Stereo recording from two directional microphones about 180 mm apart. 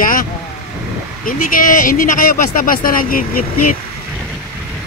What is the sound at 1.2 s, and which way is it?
Speech, 50° left (ahead or behind).